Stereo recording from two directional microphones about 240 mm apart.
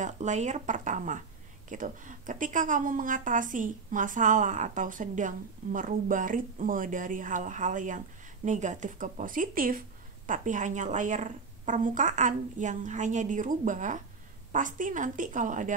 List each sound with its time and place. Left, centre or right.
0.0 s a woman's voice: right